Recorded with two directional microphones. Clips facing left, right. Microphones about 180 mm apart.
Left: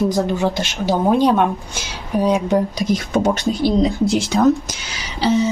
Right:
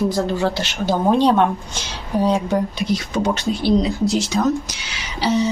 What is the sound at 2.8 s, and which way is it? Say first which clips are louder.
Speech: left 3 dB; 45° left (ahead or behind).